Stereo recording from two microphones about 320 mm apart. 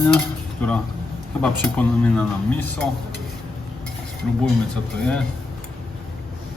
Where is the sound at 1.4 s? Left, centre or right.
Centre.